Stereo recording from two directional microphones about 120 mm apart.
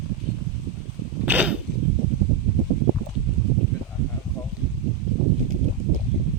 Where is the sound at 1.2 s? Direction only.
15° right (ahead or behind).